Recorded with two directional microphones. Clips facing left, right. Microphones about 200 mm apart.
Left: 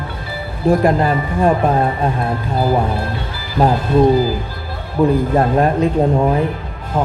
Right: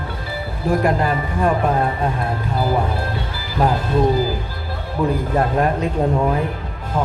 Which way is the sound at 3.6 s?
30° left (ahead or behind).